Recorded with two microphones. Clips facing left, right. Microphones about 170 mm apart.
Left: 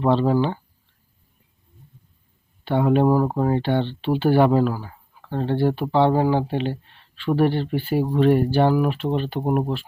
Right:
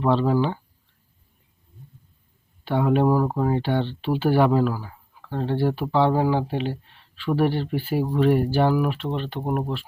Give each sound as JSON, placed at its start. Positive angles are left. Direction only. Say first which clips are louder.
{"t": 0.0, "sound": "speech", "louder": "left 2 dB", "side_deg": 0}
{"t": 2.6, "sound": "speech", "louder": "left 2 dB", "side_deg": -5}
{"t": 3.1, "sound": "speech", "louder": "left 2 dB", "side_deg": 15}
{"t": 3.3, "sound": "speech", "louder": "left 2 dB", "side_deg": 0}